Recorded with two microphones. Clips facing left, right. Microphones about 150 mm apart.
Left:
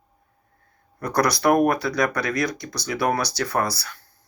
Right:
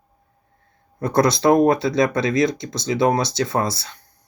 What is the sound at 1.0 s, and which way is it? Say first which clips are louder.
Speech: right 4 dB; 25° right (ahead or behind).